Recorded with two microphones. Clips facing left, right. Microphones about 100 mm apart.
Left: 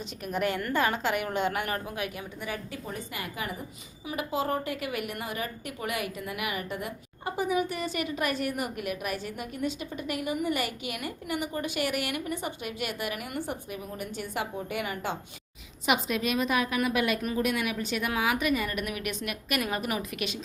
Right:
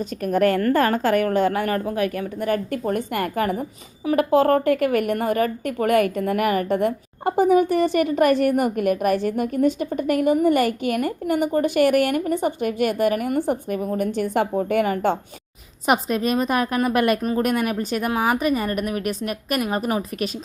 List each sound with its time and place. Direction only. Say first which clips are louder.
0.3 s a woman's voice: right 11 dB; 45° right (ahead or behind)